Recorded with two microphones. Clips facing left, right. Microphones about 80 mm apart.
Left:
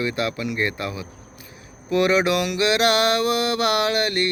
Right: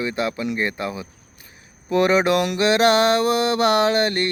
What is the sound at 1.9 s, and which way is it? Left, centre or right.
Mantra, right.